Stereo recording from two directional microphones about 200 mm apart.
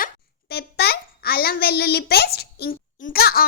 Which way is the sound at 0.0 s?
50° left (ahead or behind).